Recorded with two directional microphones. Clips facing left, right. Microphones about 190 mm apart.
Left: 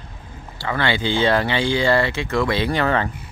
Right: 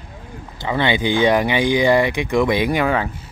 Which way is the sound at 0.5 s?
20° right (ahead or behind).